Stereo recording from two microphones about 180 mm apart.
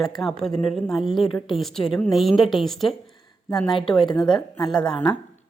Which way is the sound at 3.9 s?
25° left (ahead or behind).